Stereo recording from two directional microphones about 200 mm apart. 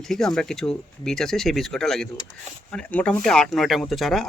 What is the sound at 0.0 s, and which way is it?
Speech, centre (ahead or behind).